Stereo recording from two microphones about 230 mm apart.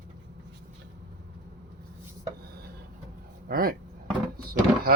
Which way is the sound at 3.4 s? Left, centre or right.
Right.